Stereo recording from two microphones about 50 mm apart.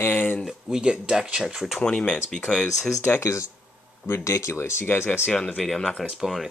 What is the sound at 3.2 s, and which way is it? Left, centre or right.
Speech, left.